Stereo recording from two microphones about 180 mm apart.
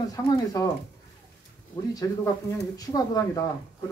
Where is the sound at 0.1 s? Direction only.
20° left (ahead or behind).